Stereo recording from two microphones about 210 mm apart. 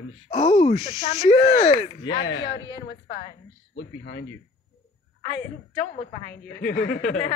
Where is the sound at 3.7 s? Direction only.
60° left (ahead or behind).